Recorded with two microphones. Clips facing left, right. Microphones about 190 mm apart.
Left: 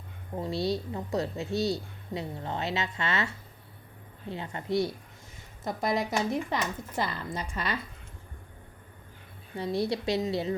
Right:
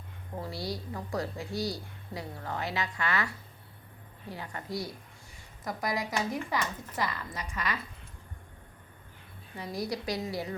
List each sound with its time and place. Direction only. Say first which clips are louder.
0.3 s a woman's voice: left 7 dB; 20° left (ahead or behind)
9.6 s a woman's voice: left 6 dB; 25° left (ahead or behind)